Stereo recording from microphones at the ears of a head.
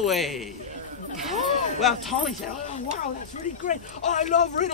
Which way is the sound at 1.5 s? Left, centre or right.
Left.